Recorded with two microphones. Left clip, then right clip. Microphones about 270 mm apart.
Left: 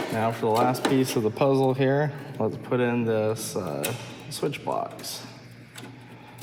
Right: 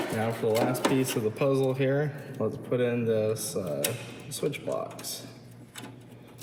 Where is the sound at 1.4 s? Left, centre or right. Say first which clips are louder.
Left 4 dB; left.